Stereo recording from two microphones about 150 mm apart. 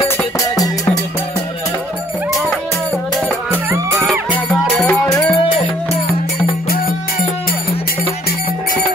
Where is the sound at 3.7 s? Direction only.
20° right (ahead or behind).